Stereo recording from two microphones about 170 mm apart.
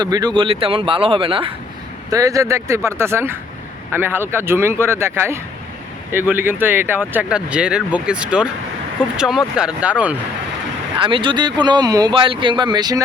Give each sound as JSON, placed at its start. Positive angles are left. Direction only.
{"t": 0.0, "sound": "speech", "side_deg": -25}
{"t": 2.0, "sound": "speech", "side_deg": -20}
{"t": 10.9, "sound": "speech", "side_deg": -30}